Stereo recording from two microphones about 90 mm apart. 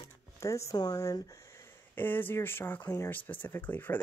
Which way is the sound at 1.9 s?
20° left (ahead or behind).